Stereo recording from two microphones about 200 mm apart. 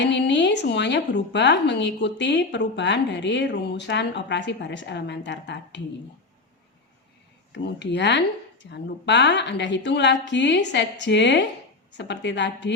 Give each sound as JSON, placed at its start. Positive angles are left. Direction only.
{"t": 0.0, "sound": "a woman's voice", "side_deg": 60}
{"t": 7.5, "sound": "a woman's voice", "side_deg": 60}